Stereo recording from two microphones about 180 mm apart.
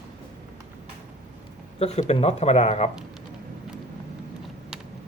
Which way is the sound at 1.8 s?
35° left (ahead or behind).